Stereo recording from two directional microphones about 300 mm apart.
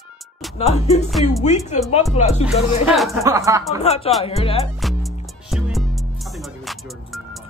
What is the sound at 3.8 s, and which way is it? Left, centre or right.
Speech, left.